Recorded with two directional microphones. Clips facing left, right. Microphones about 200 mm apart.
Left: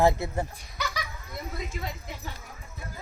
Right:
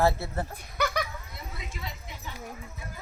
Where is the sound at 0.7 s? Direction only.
55° right (ahead or behind).